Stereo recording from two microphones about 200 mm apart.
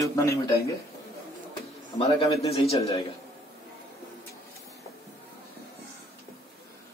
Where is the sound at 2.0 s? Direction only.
30° left (ahead or behind).